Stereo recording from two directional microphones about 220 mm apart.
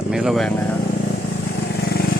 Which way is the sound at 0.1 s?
Centre (ahead or behind).